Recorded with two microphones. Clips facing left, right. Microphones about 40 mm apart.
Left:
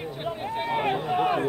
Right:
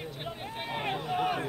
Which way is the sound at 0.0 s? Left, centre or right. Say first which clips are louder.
Left 7 dB; centre.